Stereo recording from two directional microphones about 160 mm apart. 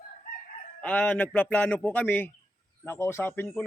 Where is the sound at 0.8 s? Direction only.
10° left (ahead or behind).